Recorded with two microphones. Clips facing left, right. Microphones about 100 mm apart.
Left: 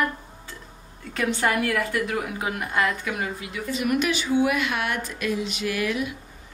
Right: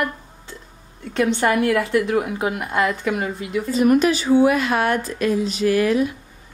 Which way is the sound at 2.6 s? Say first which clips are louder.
Right 4 dB; 5° right (ahead or behind).